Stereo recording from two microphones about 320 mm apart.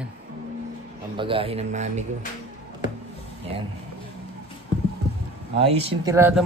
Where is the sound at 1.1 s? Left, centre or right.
Centre.